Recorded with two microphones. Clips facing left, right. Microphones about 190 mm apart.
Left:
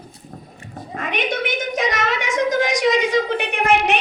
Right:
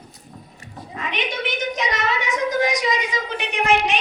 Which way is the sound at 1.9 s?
90° left.